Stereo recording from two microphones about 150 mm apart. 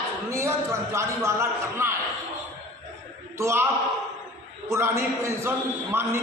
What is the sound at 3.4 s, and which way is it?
A man's voice, 20° right (ahead or behind).